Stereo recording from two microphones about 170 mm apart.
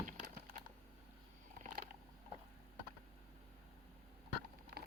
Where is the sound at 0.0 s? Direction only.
45° right (ahead or behind).